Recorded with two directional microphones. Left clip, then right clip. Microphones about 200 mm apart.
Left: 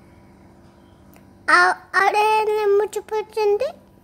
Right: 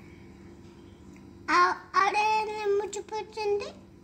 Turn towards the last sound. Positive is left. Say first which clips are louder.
# left 10 dB
turn(degrees=45)  # may be behind; listen again after turning